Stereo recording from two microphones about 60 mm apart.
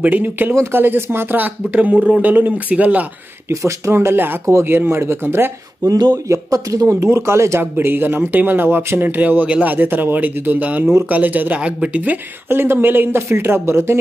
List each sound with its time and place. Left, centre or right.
0.0 s speech: right
3.4 s speech: right
5.9 s speech: right
7.7 s speech: right
12.4 s speech: right